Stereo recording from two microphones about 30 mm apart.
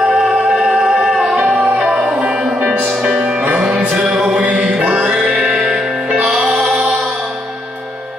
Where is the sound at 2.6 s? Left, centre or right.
Right.